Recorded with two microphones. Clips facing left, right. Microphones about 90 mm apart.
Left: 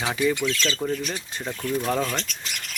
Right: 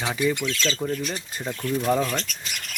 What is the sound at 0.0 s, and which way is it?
Speech, 5° left (ahead or behind).